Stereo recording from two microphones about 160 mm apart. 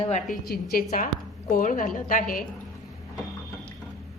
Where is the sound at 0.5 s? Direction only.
70° left (ahead or behind).